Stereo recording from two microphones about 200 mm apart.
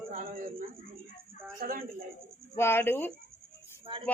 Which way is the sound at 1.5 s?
45° right (ahead or behind).